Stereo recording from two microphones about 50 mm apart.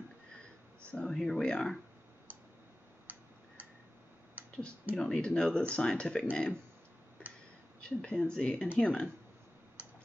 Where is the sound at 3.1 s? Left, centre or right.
Right.